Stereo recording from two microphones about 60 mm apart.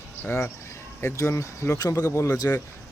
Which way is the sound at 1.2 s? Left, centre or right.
Left.